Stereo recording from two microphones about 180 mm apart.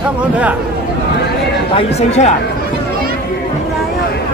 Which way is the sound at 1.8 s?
35° left (ahead or behind).